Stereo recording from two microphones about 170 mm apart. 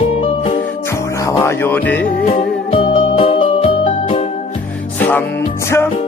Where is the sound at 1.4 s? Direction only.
10° left (ahead or behind).